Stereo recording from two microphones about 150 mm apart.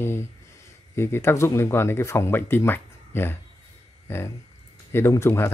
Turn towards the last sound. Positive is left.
turn(degrees=15)  # may be behind; listen again after turning